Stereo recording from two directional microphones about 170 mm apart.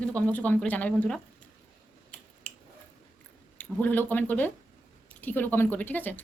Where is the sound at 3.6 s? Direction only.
10° left (ahead or behind).